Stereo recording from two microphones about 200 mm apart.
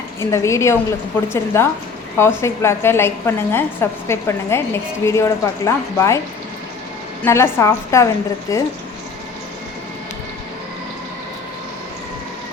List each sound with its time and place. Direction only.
0.2 s a woman's voice: 15° left (ahead or behind)
7.3 s a woman's voice: 15° left (ahead or behind)